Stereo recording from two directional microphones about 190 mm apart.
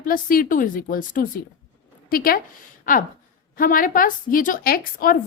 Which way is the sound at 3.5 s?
45° left (ahead or behind).